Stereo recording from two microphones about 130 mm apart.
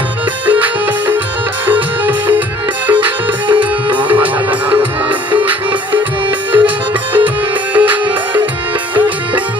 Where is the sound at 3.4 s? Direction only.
40° right (ahead or behind).